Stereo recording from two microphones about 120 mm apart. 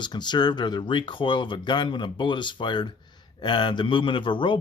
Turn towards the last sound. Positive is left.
turn(degrees=45)  # may be behind; listen again after turning